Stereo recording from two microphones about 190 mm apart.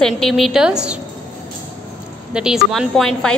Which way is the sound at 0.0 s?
Centre (ahead or behind).